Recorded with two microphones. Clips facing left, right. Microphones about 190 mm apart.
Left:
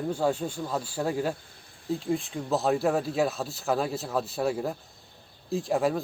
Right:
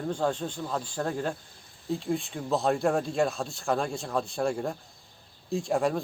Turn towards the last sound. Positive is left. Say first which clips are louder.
# left 1 dB
turn(degrees=0)  # may be behind; listen again after turning